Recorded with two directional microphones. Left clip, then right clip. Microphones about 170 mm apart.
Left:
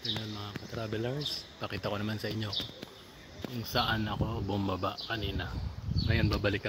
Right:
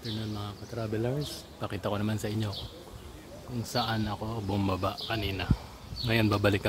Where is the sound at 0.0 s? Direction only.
Centre (ahead or behind).